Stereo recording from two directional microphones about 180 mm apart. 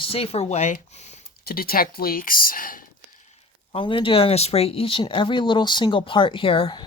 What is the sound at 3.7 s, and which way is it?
Speech, 30° left (ahead or behind).